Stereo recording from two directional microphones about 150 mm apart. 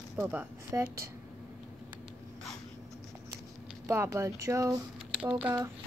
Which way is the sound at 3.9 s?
20° right (ahead or behind).